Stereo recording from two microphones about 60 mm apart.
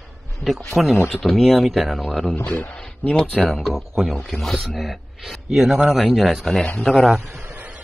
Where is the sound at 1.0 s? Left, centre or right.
Centre.